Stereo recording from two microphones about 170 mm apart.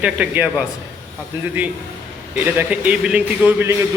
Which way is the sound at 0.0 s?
10° right (ahead or behind).